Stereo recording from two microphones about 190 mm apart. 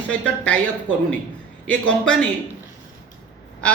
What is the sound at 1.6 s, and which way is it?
Speech, 5° left (ahead or behind).